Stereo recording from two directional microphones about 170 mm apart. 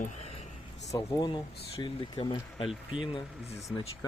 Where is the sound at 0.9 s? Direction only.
25° left (ahead or behind).